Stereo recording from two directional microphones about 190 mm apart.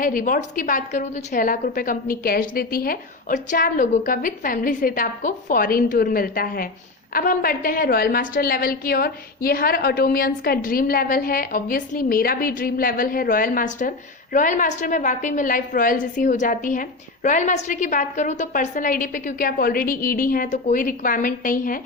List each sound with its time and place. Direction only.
0.0 s a woman's voice: 45° left (ahead or behind)